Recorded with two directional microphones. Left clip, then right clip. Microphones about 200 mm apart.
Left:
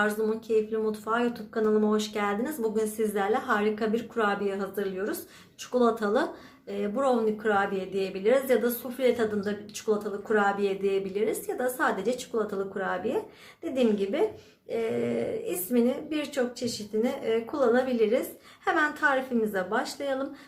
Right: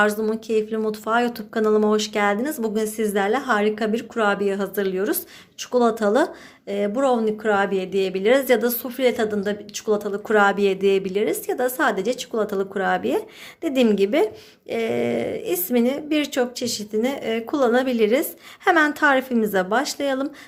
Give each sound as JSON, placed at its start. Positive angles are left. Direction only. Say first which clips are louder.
{"t": 0.0, "sound": "speech", "louder": "right 7 dB", "side_deg": -40}
{"t": 5.7, "sound": "speech", "louder": "right 6 dB", "side_deg": -40}